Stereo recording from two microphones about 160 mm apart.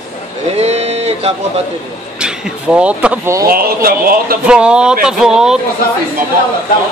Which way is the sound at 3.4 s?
65° right (ahead or behind).